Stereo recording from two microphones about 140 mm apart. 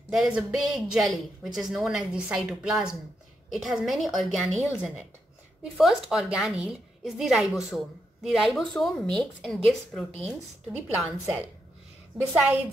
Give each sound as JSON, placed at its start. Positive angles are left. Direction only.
{"t": 0.1, "sound": "speech", "side_deg": -5}
{"t": 10.1, "sound": "speech", "side_deg": -50}
{"t": 11.0, "sound": "speech", "side_deg": -5}